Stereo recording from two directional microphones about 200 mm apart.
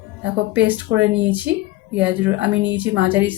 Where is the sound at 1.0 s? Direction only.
65° right (ahead or behind).